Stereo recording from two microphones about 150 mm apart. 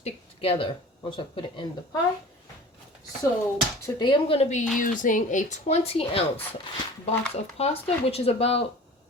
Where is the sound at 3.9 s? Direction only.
30° left (ahead or behind); by 4.6 s 45° left (ahead or behind).